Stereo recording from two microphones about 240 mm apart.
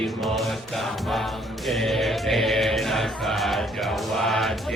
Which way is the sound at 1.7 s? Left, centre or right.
Centre.